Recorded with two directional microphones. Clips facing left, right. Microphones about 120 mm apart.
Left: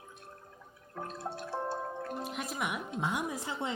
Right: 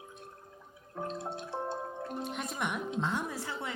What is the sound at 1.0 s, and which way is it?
Music, 20° right (ahead or behind).